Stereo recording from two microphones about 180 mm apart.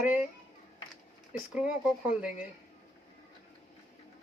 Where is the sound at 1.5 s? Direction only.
5° right (ahead or behind).